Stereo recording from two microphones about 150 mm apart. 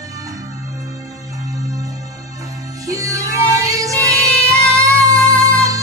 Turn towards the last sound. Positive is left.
turn(degrees=-20)  # may be behind; listen again after turning